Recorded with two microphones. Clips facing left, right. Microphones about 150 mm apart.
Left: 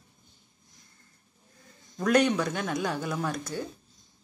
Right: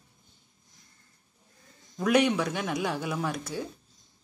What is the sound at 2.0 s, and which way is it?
Speech, 5° right (ahead or behind).